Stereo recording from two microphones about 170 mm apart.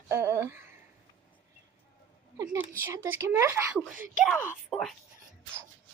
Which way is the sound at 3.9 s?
55° right (ahead or behind).